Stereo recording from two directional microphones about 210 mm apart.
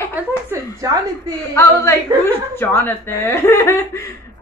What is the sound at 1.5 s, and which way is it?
Speech, 10° left (ahead or behind).